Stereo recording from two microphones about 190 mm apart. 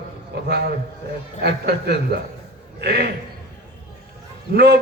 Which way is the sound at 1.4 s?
55° right (ahead or behind).